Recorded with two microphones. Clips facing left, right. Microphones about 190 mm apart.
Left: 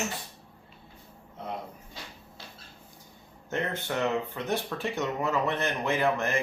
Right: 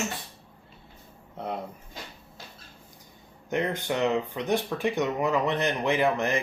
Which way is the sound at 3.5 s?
15° right (ahead or behind).